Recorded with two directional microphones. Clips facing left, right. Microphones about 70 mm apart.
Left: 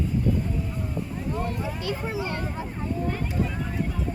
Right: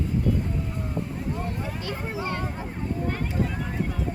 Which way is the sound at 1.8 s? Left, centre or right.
Left.